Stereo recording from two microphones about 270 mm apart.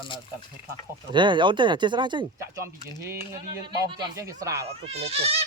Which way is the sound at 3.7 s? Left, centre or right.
Centre.